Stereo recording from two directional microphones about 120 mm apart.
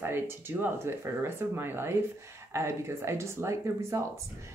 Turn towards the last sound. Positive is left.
turn(degrees=-25)  # may be behind; listen again after turning